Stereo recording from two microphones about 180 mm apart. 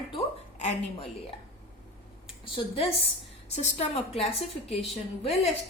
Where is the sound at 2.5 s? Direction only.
35° left (ahead or behind).